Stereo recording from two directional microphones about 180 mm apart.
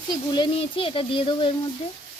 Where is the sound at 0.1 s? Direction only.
25° left (ahead or behind).